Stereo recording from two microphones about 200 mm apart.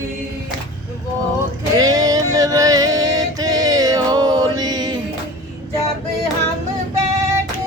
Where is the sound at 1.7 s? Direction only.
20° right (ahead or behind).